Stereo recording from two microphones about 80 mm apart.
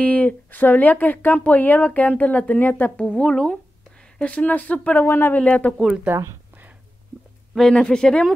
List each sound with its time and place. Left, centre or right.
0.0 s speech: centre
3.0 s speech: centre; by 5.4 s left
5.4 s speech: centre
6.0 s speech: right
7.5 s speech: centre